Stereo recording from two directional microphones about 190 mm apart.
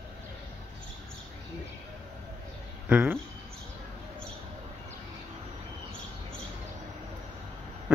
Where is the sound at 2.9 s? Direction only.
10° right (ahead or behind).